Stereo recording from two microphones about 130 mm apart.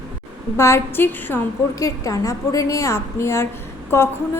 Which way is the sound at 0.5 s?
20° left (ahead or behind).